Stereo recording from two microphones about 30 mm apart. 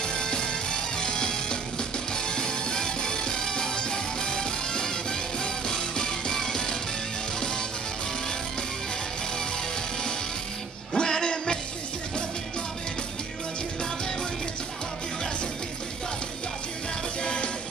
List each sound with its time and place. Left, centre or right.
0.0 s music: left
11.0 s music: left
17.2 s music: left